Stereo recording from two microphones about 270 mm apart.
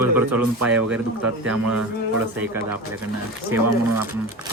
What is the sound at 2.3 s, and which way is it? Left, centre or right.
Speech, centre.